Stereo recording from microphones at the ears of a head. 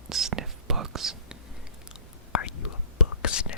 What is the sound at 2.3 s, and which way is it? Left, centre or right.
Whispering, left.